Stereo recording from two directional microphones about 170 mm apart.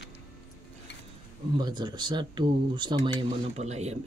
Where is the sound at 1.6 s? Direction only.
25° right (ahead or behind).